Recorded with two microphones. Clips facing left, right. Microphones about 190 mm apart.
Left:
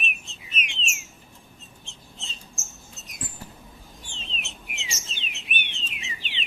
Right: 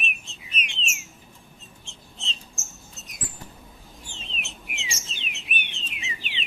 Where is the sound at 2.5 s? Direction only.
Centre (ahead or behind).